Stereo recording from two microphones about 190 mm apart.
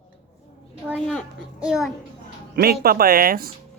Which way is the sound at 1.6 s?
5° right (ahead or behind).